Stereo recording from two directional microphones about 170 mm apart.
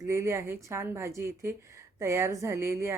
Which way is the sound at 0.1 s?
15° right (ahead or behind).